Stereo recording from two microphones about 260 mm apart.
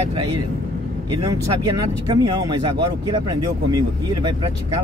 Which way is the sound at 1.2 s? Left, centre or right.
Centre.